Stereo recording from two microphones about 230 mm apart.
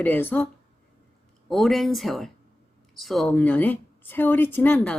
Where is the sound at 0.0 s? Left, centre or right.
Centre.